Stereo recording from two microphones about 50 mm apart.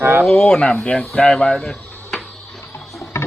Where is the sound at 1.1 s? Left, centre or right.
Left.